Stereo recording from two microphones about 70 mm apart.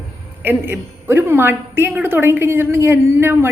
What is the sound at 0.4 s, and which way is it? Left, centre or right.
A woman's voice, right.